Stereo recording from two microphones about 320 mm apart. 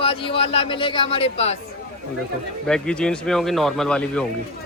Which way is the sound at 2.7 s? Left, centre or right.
Centre.